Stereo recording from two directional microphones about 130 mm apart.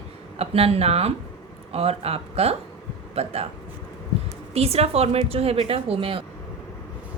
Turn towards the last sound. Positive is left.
turn(degrees=-45)  # may be behind; listen again after turning